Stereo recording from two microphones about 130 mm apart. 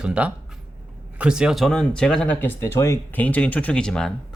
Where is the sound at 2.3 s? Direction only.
20° left (ahead or behind).